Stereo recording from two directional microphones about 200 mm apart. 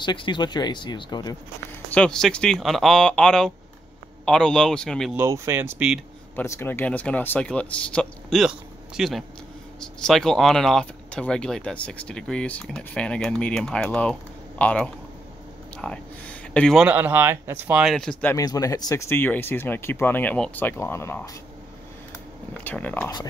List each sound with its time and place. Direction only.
0.0 s speech: 25° left (ahead or behind)
2.0 s speech: 5° left (ahead or behind)
5.1 s speech: 15° right (ahead or behind)
6.3 s speech: 10° left (ahead or behind)
18.3 s speech: 15° left (ahead or behind)
22.6 s speech: 10° left (ahead or behind)